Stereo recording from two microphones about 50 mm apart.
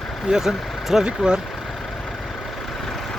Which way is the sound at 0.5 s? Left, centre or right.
Centre.